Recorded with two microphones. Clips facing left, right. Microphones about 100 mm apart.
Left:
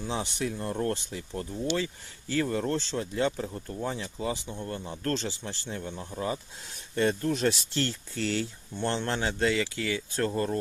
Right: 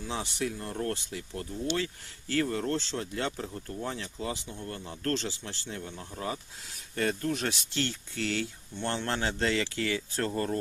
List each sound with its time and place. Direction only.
0.0 s speech: 25° left (ahead or behind)